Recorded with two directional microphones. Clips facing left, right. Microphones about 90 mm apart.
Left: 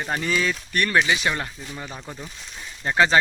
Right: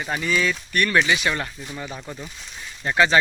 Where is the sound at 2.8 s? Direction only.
30° left (ahead or behind).